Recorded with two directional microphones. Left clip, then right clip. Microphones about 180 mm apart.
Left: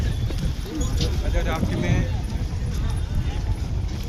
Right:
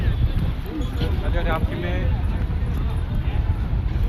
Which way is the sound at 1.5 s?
30° right (ahead or behind).